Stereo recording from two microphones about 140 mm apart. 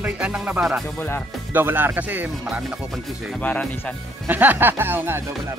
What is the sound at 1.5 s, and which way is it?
Speech, 15° right (ahead or behind).